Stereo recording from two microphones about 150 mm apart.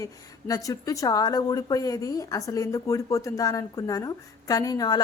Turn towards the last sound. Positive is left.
turn(degrees=25)  # may be behind; listen again after turning